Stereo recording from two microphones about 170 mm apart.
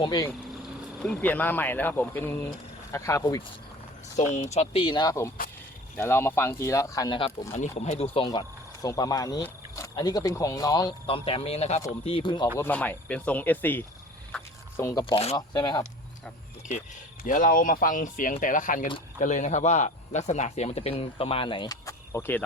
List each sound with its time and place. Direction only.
0.0 s speech: 20° left (ahead or behind)
0.9 s speech: 5° left (ahead or behind); by 3.4 s 20° left (ahead or behind)
4.2 s speech: 45° left (ahead or behind)
12.5 s speech: 10° left (ahead or behind)
14.3 s a sound: 15° left (ahead or behind)
15.0 s speech: 35° left (ahead or behind)
15.4 s speech: 25° left (ahead or behind)
17.2 s speech: 50° left (ahead or behind); by 22.4 s 15° left (ahead or behind)